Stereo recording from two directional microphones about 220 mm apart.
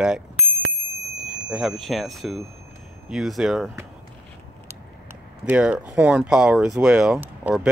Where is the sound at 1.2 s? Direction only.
Centre (ahead or behind).